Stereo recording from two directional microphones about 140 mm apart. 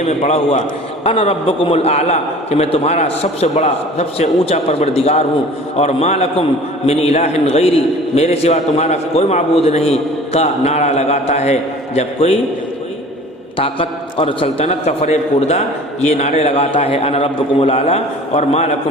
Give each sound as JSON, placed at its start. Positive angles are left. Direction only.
{"t": 0.0, "sound": "a man's voice", "side_deg": 50}
{"t": 13.6, "sound": "a man's voice", "side_deg": 40}